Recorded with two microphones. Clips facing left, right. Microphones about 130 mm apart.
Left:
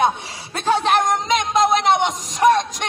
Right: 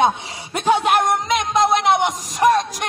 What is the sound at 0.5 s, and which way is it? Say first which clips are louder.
Music: right 1 dB; 15° right (ahead or behind).